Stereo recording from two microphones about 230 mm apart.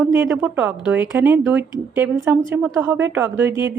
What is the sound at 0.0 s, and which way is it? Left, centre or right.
Speech, centre.